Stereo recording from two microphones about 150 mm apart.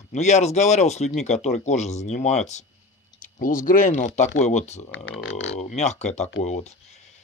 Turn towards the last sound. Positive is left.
turn(degrees=50)  # may be behind; listen again after turning